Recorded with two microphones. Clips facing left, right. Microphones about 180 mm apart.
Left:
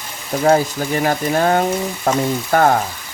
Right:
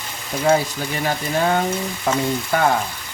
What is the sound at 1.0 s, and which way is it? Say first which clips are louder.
Speech: left 3 dB; 45° left (ahead or behind).